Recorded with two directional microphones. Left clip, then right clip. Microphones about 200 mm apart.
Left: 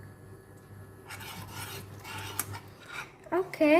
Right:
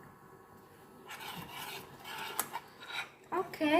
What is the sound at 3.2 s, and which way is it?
Speech, 45° left (ahead or behind).